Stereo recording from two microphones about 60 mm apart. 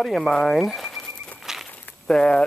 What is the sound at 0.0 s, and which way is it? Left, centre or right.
Speech, centre.